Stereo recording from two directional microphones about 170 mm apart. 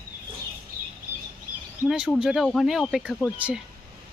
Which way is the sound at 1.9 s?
5° right (ahead or behind).